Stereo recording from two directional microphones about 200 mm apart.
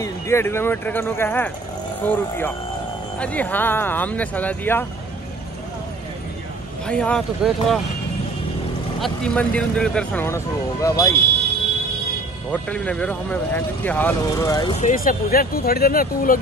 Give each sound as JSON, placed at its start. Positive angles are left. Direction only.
{"t": 0.0, "sound": "speech", "side_deg": 15}
{"t": 6.9, "sound": "speech", "side_deg": 5}
{"t": 9.0, "sound": "speech", "side_deg": 5}
{"t": 12.4, "sound": "speech", "side_deg": 5}
{"t": 14.7, "sound": "speech", "side_deg": 40}